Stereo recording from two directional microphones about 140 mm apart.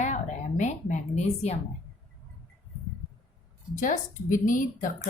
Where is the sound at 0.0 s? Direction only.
60° left (ahead or behind).